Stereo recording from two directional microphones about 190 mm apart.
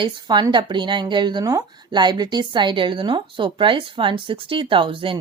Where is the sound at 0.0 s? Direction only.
25° right (ahead or behind).